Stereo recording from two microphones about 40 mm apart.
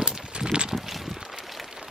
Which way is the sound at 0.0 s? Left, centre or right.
Centre.